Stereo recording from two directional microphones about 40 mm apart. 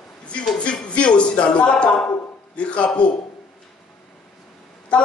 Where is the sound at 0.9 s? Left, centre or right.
Left.